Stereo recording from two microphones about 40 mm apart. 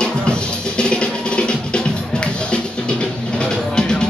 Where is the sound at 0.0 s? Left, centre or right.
Left.